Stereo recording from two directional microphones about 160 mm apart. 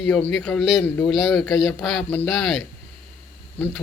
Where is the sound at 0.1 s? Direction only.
5° left (ahead or behind).